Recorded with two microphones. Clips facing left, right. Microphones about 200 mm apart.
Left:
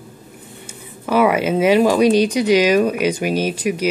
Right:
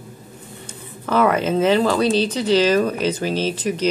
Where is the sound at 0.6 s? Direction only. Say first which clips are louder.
Left 2 dB; 10° left (ahead or behind).